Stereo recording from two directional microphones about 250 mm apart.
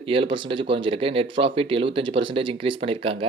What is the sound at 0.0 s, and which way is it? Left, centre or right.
Speech, right.